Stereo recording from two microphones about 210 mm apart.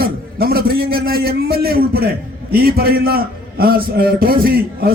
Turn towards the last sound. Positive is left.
turn(degrees=-45)  # may be behind; listen again after turning